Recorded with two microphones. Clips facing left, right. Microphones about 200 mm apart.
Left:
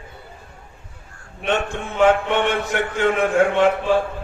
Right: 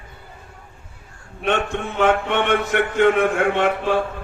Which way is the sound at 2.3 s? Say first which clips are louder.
Right 1 dB; 60° right (ahead or behind).